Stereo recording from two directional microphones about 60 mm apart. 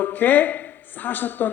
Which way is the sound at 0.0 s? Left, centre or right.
Left.